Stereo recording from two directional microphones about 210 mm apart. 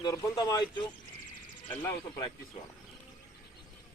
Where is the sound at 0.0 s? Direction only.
20° left (ahead or behind).